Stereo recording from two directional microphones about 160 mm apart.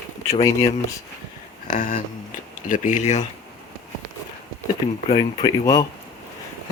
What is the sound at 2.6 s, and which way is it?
Speech, 55° left (ahead or behind).